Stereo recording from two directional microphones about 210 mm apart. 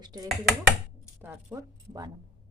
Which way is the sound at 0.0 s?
20° right (ahead or behind).